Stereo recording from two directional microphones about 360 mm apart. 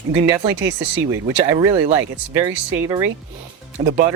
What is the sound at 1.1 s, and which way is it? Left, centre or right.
Speech, centre.